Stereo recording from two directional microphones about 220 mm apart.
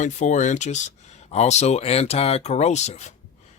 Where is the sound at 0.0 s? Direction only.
35° left (ahead or behind).